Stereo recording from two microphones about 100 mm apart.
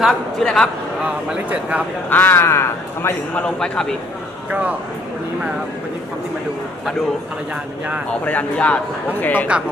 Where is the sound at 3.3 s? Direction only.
10° left (ahead or behind).